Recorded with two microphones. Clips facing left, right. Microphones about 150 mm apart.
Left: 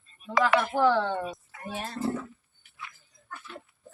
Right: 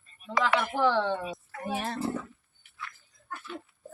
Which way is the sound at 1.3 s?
90° right.